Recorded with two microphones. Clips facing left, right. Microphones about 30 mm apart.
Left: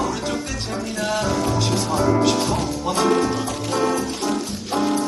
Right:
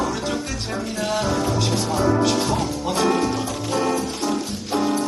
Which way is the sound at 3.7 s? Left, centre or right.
Centre.